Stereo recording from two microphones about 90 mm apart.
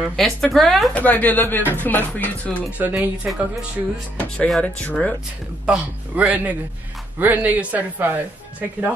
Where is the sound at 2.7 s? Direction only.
20° right (ahead or behind).